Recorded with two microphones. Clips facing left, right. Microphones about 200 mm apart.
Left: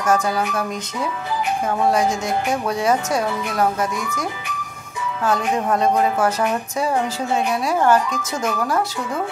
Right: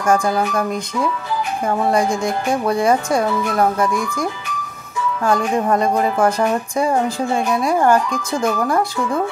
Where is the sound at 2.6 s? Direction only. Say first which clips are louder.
Right 6 dB; 10° right (ahead or behind).